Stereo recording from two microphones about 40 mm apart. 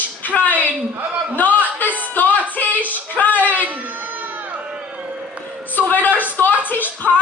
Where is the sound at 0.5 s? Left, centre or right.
Right.